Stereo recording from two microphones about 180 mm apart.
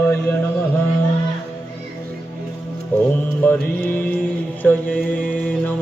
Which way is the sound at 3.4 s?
10° left (ahead or behind).